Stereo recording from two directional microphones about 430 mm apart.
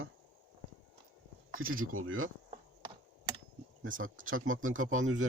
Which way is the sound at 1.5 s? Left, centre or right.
Right.